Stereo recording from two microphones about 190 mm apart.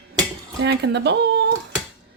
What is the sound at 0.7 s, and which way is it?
Speech, 60° right (ahead or behind).